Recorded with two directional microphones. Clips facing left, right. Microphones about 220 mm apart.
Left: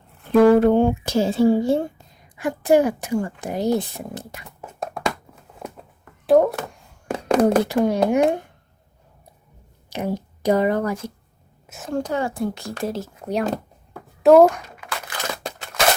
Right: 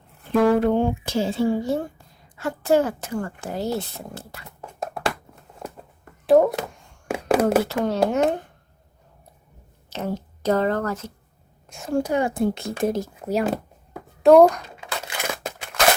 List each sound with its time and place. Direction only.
0.5 s speech: 45° left (ahead or behind); by 2.0 s 25° left (ahead or behind)
2.3 s speech: 15° left (ahead or behind)
4.6 s a sound: 5° right (ahead or behind)
7.7 s speech: centre (ahead or behind)
8.1 s speech: 10° left (ahead or behind)
9.9 s speech: 15° left (ahead or behind)
11.6 s a sound: 5° left (ahead or behind)
11.9 s a child's voice: 10° right (ahead or behind)
14.8 s tearing: 25° right (ahead or behind)
15.2 s crushing: 5° right (ahead or behind)